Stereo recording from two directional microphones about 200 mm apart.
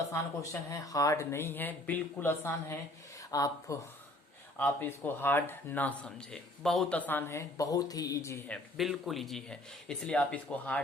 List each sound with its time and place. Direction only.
0.7 s speech: 15° left (ahead or behind)
8.8 s speech: centre (ahead or behind)